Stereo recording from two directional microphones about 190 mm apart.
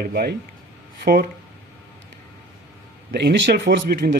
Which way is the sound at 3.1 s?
65° right (ahead or behind).